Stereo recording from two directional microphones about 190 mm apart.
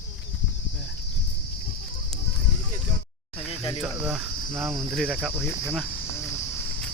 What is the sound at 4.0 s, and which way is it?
Cricket, 5° right (ahead or behind).